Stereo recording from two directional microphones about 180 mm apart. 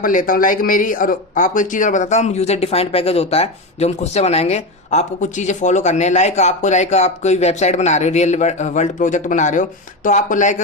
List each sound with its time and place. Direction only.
0.0 s speech: 50° left (ahead or behind)